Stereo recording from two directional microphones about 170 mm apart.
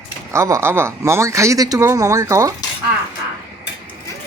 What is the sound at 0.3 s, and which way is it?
Speech, 15° right (ahead or behind).